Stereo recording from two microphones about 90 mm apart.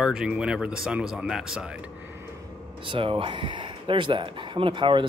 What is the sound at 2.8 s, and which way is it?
Speech, 80° right.